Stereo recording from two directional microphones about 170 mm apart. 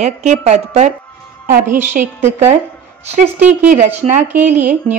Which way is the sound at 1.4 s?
55° right (ahead or behind).